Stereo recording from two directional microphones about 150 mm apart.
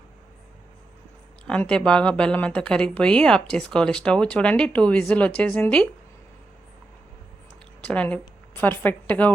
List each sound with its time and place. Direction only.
1.5 s a woman's voice: 5° left (ahead or behind)
7.8 s a woman's voice: 10° left (ahead or behind)